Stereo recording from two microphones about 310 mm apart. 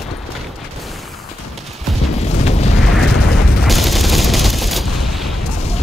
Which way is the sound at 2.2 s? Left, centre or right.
Centre.